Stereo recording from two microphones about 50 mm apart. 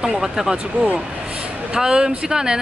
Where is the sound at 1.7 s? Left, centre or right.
Centre.